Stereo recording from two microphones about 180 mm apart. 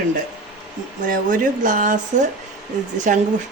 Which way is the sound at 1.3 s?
45° right (ahead or behind).